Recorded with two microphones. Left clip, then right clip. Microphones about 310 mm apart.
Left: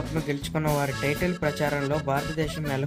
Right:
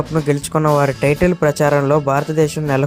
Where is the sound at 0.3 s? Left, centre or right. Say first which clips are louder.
Right 12 dB; centre.